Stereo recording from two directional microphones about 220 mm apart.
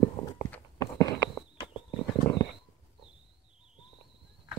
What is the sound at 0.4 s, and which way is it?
Walk, 10° left (ahead or behind).